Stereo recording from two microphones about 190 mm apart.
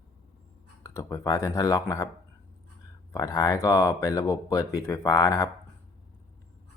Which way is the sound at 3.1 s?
15° left (ahead or behind).